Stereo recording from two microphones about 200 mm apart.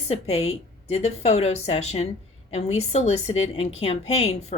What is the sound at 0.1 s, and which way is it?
A woman's voice, 30° left (ahead or behind).